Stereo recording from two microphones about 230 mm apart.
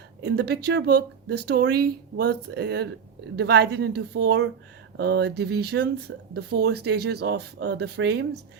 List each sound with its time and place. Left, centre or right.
0.2 s speech: right